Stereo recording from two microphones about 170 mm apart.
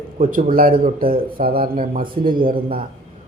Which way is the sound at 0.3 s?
50° right (ahead or behind).